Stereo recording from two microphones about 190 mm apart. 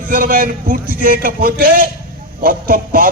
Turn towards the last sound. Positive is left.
turn(degrees=-50)  # may be behind; listen again after turning